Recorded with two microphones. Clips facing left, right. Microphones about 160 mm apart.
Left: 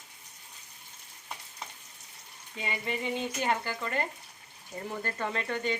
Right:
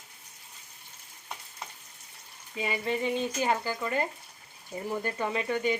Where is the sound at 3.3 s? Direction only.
10° right (ahead or behind).